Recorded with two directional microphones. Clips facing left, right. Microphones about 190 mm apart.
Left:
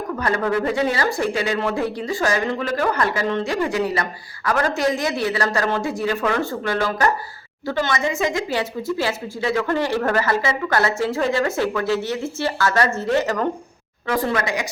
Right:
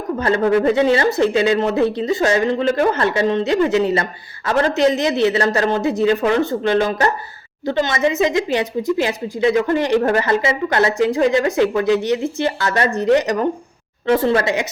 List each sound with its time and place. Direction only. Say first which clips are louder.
0.2 s speech: right 6 dB; 25° right (ahead or behind)